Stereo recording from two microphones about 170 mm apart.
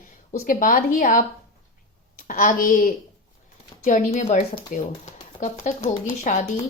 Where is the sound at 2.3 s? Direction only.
50° left (ahead or behind).